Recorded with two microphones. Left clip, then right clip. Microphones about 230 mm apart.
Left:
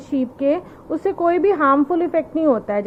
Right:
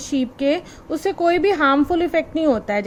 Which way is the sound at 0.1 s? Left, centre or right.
Right.